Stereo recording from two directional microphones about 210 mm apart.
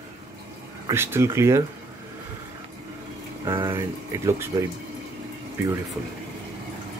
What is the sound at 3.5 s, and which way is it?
Speech, 15° right (ahead or behind).